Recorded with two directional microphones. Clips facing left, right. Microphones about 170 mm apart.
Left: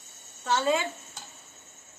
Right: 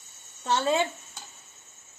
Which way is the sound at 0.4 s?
30° right (ahead or behind).